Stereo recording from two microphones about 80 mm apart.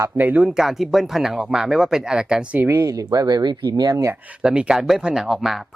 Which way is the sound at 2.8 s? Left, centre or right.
Right.